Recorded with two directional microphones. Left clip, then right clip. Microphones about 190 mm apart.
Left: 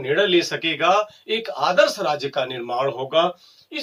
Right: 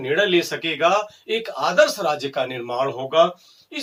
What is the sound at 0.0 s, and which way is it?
Speech, 10° left (ahead or behind).